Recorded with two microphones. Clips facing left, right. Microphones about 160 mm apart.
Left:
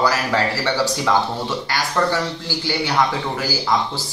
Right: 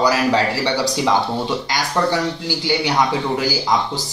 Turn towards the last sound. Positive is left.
turn(degrees=-15)  # may be behind; listen again after turning